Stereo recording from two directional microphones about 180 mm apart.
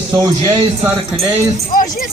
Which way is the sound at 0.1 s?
25° right (ahead or behind).